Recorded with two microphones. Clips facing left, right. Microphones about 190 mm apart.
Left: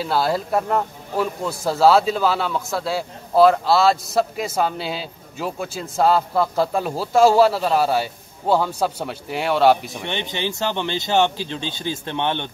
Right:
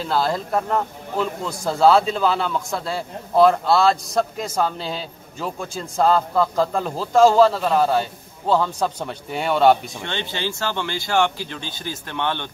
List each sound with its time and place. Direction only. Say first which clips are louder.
0.0 s speech: left 1 dB; 5° left (ahead or behind)
9.9 s speech: left 1 dB; 15° left (ahead or behind)